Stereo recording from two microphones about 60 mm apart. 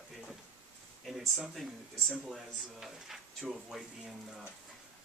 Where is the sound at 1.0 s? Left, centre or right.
Centre.